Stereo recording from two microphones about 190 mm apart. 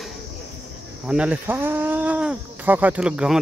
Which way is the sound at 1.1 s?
5° right (ahead or behind).